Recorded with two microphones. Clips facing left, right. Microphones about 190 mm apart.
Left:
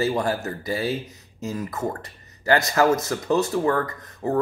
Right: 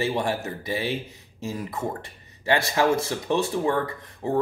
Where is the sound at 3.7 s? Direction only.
10° right (ahead or behind).